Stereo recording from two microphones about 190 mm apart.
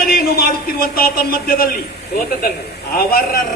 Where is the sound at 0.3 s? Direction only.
50° left (ahead or behind).